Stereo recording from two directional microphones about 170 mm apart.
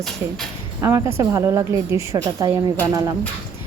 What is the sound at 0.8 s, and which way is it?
A woman's voice, 15° right (ahead or behind).